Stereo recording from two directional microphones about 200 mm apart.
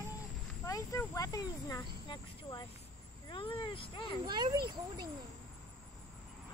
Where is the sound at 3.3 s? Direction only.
25° left (ahead or behind).